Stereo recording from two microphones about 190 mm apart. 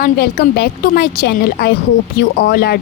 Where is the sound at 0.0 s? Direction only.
50° left (ahead or behind).